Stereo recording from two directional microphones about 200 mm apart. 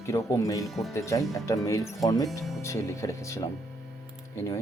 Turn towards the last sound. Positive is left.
turn(degrees=15)  # may be behind; listen again after turning